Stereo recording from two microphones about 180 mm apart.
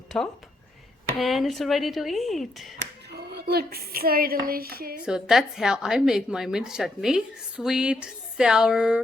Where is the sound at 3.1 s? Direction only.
65° right (ahead or behind).